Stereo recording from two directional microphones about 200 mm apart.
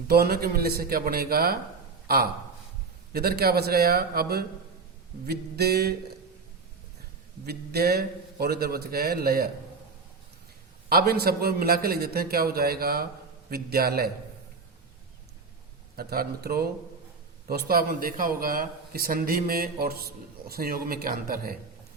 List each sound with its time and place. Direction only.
0.1 s a man's voice: 50° right (ahead or behind)
3.1 s a man's voice: 50° right (ahead or behind)
7.4 s a man's voice: 50° right (ahead or behind)
10.8 s a man's voice: 50° right (ahead or behind)
16.0 s a man's voice: 50° right (ahead or behind)